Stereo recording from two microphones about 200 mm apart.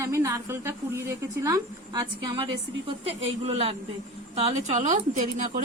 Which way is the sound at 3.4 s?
30° right (ahead or behind).